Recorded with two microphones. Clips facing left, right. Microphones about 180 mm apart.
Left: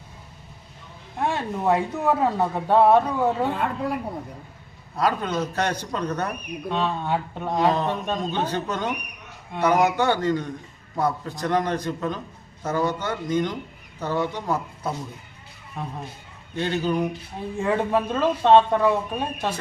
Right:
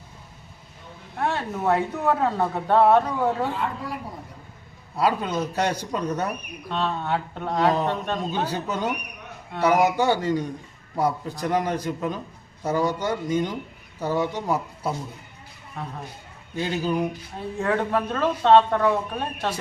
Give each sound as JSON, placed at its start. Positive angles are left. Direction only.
{"t": 1.2, "sound": "a sound", "side_deg": 15}
{"t": 1.6, "sound": "speech", "side_deg": 10}
{"t": 3.5, "sound": "speech", "side_deg": 60}
{"t": 4.9, "sound": "a man's voice", "side_deg": -10}
{"t": 6.7, "sound": "speech", "side_deg": 10}
{"t": 8.3, "sound": "a man's voice", "side_deg": -5}
{"t": 15.8, "sound": "speech", "side_deg": 15}
{"t": 16.6, "sound": "a man's voice", "side_deg": -10}
{"t": 17.6, "sound": "speech", "side_deg": 10}